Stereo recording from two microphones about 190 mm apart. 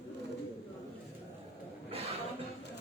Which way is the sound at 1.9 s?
30° right (ahead or behind).